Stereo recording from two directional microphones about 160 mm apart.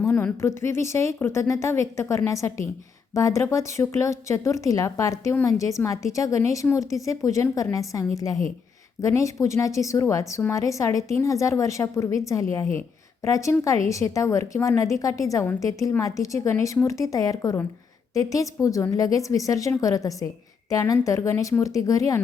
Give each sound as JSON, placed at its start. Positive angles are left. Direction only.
{"t": 0.0, "sound": "a woman's voice", "side_deg": 15}